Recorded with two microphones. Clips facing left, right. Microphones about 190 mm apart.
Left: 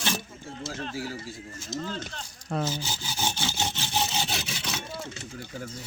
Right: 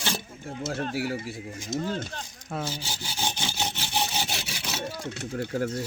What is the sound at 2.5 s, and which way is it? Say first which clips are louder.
Speech: left 3 dB; 10° right (ahead or behind).